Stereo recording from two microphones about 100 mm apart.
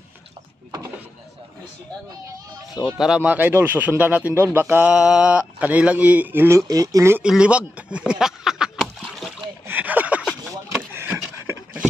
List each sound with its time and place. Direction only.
2.8 s speech: 45° left (ahead or behind)
3.2 s speech: 15° right (ahead or behind)
4.9 s speech: 10° right (ahead or behind)
6.7 s speech: 35° right (ahead or behind)
7.2 s speech: 10° right (ahead or behind)
8.1 s a sound: 5° right (ahead or behind)
9.7 s a sound: 15° right (ahead or behind)